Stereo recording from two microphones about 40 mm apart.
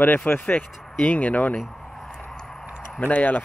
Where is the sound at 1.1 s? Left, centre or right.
Left.